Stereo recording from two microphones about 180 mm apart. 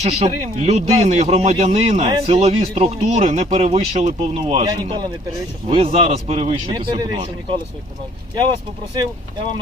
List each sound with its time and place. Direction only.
0.0 s speech: 35° right (ahead or behind)
4.6 s speech: 25° right (ahead or behind)